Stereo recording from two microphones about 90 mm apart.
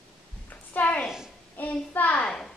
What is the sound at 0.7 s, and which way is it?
Speech, 20° left (ahead or behind).